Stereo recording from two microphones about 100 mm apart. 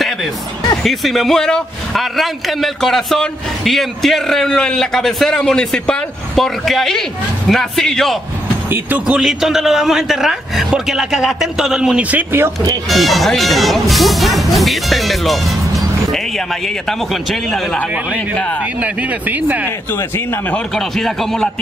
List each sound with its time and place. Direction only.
0.8 s a man's voice: centre (ahead or behind)
8.6 s a man's voice: 20° right (ahead or behind)
12.9 s a man's voice: centre (ahead or behind)
17.7 s speech: 15° left (ahead or behind)
18.8 s speech: 15° right (ahead or behind)
20.5 s a man's voice: 5° left (ahead or behind)